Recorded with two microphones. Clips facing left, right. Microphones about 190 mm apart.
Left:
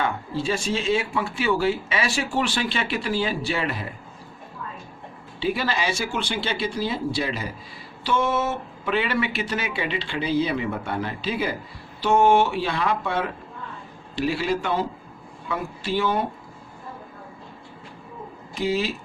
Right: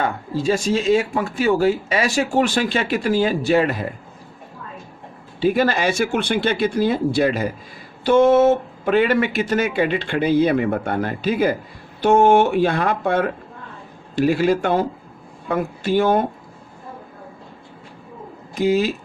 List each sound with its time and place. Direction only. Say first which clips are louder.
0.0 s speech: right 4 dB; 45° right (ahead or behind)
5.4 s speech: right 7 dB; 50° right (ahead or behind)
18.5 s speech: right 6 dB; 45° right (ahead or behind)